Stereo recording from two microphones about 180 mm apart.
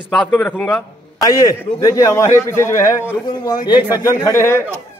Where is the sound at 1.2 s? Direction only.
20° left (ahead or behind).